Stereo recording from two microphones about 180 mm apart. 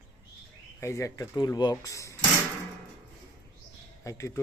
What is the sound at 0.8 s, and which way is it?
Speech, 15° left (ahead or behind).